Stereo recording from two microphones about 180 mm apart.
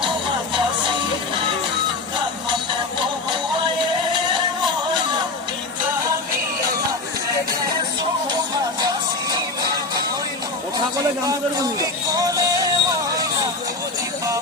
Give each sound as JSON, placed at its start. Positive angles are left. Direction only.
{"t": 8.8, "sound": "music", "side_deg": -25}
{"t": 11.8, "sound": "music", "side_deg": -20}